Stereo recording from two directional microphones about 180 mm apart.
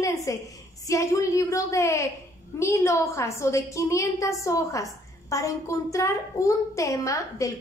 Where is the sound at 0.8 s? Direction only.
15° left (ahead or behind).